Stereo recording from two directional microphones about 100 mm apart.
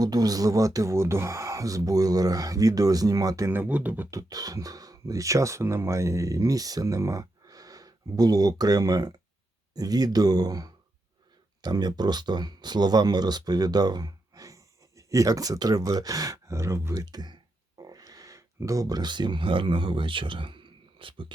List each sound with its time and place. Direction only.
0.0 s speech: 40° right (ahead or behind)
3.5 s speech: 15° right (ahead or behind)
4.1 s speech: 35° right (ahead or behind); by 21.3 s 60° right (ahead or behind)